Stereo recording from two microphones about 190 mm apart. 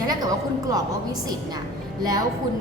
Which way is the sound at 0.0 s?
20° right (ahead or behind).